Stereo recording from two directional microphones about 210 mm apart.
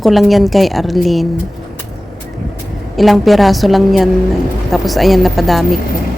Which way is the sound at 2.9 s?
Centre (ahead or behind).